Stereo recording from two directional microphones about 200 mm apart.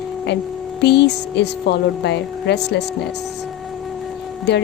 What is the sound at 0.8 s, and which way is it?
A woman's voice, 55° left (ahead or behind).